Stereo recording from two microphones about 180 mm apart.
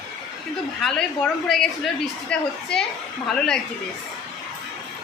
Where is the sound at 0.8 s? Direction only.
Centre (ahead or behind).